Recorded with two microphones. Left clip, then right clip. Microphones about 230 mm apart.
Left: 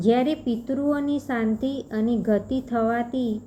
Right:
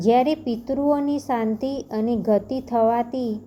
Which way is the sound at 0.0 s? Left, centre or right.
Centre.